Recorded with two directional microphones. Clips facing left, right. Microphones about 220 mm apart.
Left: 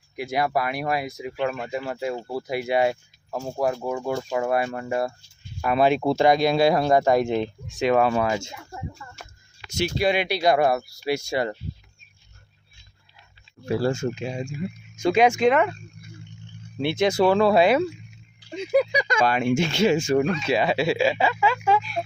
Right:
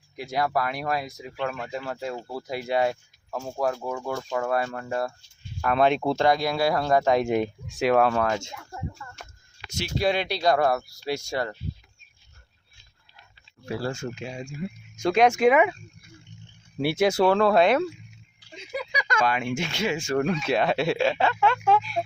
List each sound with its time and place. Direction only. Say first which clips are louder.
0.2 s speech: left 2 dB; 10° left (ahead or behind)
7.3 s speech: even; 10° right (ahead or behind); by 11.4 s 5° left (ahead or behind)
13.7 s speech: left 6 dB; 25° left (ahead or behind)
14.5 s speech: left 2 dB; 5° left (ahead or behind)
16.7 s speech: left 1 dB; 10° right (ahead or behind)
18.5 s speech: left 13 dB; 60° left (ahead or behind)
19.2 s speech: left 5 dB; 35° left (ahead or behind)
20.4 s speech: left 1 dB; centre (ahead or behind)